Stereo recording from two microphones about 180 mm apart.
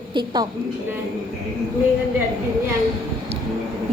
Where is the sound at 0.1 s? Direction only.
25° right (ahead or behind).